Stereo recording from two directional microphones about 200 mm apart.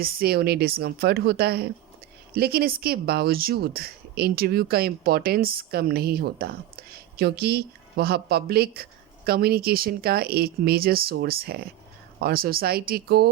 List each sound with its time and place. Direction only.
0.0 s speech: 50° right (ahead or behind)